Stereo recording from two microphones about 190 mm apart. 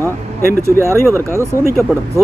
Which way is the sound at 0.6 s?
15° right (ahead or behind).